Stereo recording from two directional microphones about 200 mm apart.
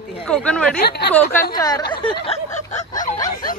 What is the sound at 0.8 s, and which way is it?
Speech, 55° left (ahead or behind).